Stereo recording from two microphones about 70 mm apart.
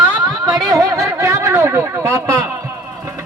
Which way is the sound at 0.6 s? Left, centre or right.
Right.